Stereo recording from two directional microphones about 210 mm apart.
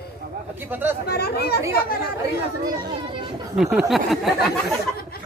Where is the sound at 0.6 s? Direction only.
10° right (ahead or behind).